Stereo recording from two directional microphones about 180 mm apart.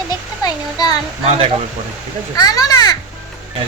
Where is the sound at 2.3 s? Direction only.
20° left (ahead or behind).